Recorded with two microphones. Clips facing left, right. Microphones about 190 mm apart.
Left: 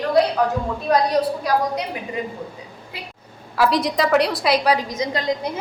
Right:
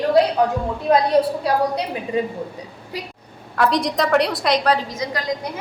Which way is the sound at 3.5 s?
5° left (ahead or behind).